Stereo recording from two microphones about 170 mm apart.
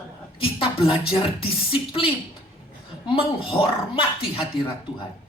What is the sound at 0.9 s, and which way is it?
Speech, 30° left (ahead or behind).